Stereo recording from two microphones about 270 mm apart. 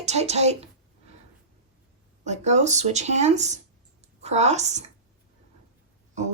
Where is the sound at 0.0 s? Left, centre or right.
Right.